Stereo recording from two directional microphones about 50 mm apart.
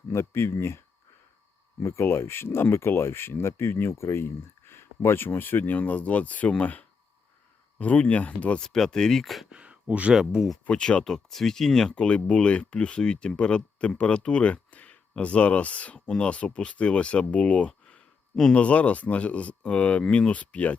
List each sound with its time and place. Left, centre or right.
0.1 s speech: left
1.8 s speech: left
8.6 s speech: centre
9.5 s a sound: right
10.1 s speech: centre
10.7 s speech: centre
18.5 s speech: left